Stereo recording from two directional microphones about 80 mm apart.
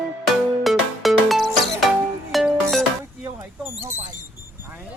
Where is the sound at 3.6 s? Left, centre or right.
Right.